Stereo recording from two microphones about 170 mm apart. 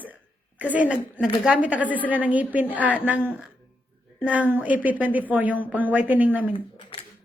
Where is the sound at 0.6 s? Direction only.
10° right (ahead or behind).